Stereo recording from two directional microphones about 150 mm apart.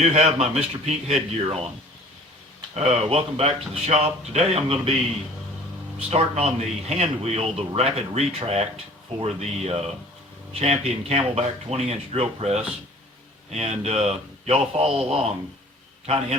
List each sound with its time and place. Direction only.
0.0 s speech: 45° right (ahead or behind)
2.7 s speech: 45° right (ahead or behind)
6.0 s speech: 45° right (ahead or behind)